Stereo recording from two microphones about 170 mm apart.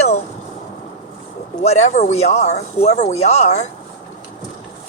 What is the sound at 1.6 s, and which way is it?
Speech, 40° left (ahead or behind).